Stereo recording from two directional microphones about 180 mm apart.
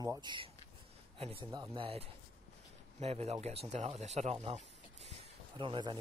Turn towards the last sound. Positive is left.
turn(degrees=-25)  # may be behind; listen again after turning